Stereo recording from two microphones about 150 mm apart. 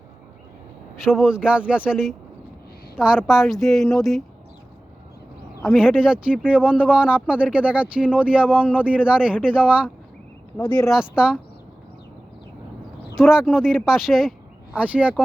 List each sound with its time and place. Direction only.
1.0 s speech: 5° right (ahead or behind)
5.7 s speech: 5° right (ahead or behind)
10.6 s speech: 30° left (ahead or behind)
10.8 s speech: 5° right (ahead or behind)
13.1 s speech: 5° right (ahead or behind)